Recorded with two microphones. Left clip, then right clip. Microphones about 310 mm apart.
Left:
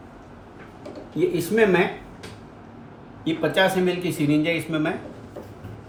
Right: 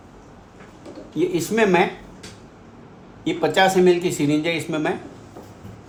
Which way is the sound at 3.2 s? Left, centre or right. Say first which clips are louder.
Right 3 dB; right.